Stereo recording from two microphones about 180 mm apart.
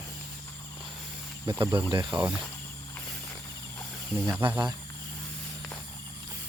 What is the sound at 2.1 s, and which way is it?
Speech, 25° right (ahead or behind).